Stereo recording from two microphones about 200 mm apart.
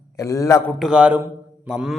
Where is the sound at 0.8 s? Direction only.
5° right (ahead or behind).